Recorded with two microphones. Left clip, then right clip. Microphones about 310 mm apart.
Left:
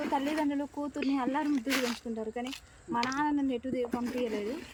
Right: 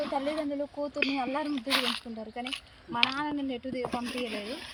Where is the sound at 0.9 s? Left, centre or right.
Centre.